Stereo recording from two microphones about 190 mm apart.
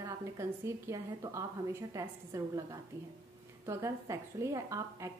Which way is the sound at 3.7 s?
15° right (ahead or behind).